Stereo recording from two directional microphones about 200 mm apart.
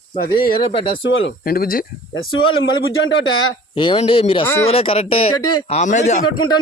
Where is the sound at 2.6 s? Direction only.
80° left.